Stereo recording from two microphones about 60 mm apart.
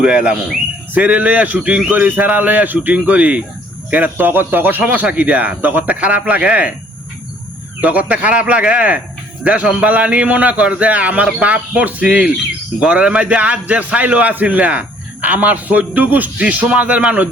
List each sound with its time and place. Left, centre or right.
0.0 s a man's voice: centre
7.8 s a man's voice: right